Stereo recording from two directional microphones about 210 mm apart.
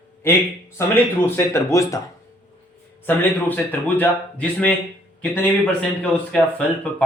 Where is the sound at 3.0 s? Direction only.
10° left (ahead or behind).